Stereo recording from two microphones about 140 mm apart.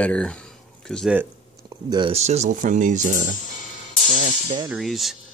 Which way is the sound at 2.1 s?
50° right (ahead or behind).